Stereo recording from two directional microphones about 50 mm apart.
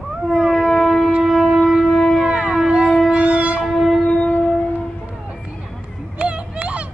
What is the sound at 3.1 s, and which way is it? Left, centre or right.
Music, right.